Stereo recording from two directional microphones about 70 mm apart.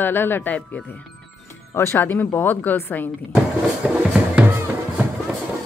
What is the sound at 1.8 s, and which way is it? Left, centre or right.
Speech, left.